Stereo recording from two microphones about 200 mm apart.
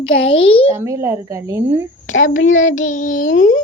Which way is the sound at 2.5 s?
40° left (ahead or behind).